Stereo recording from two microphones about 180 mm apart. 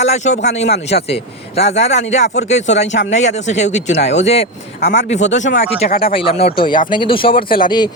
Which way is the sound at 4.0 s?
80° left.